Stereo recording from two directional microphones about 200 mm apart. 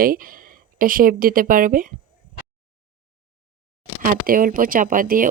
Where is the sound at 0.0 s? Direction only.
45° right (ahead or behind).